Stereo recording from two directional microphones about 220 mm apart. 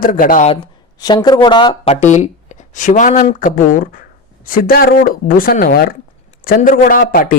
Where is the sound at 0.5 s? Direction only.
20° left (ahead or behind).